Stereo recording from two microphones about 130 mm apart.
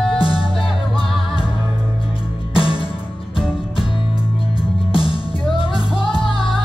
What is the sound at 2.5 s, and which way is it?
Music, 40° left (ahead or behind).